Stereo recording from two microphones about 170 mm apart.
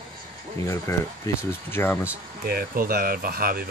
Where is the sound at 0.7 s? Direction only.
15° left (ahead or behind).